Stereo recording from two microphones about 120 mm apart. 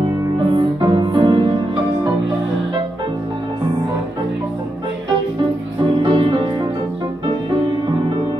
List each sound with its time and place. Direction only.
0.7 s music: 40° right (ahead or behind)
5.8 s music: 45° right (ahead or behind)